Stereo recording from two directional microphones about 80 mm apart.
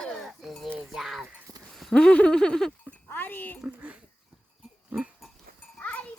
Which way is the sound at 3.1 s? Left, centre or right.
Left.